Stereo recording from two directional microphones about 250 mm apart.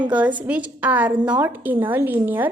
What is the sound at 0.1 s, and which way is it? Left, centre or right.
A woman's voice, centre.